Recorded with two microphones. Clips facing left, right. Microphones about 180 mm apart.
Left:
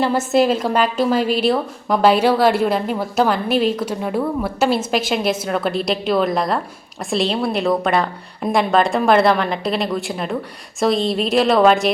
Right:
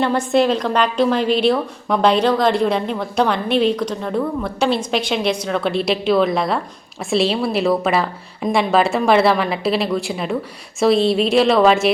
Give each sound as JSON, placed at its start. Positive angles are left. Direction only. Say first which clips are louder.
{"t": 0.0, "sound": "a woman's voice", "louder": "even", "side_deg": 5}